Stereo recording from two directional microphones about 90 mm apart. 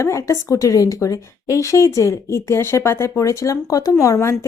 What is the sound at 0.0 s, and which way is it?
Speech, 35° left (ahead or behind).